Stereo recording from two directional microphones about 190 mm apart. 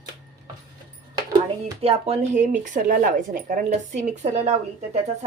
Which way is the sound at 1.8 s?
35° right (ahead or behind).